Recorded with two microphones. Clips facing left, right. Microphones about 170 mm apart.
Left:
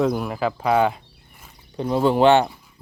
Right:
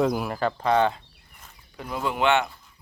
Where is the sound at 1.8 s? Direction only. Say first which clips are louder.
Left 9 dB; 30° left (ahead or behind).